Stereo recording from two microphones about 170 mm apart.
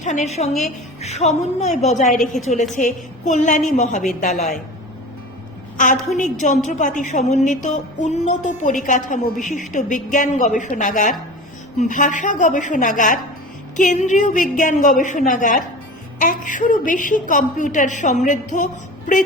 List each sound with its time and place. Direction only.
0.0 s a woman's voice: 45° left (ahead or behind)
5.7 s a woman's voice: 50° left (ahead or behind)